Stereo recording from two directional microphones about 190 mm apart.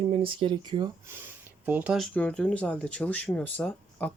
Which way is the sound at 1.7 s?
5° right (ahead or behind).